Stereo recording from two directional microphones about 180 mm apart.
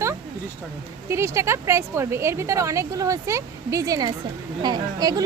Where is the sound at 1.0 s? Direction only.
15° right (ahead or behind).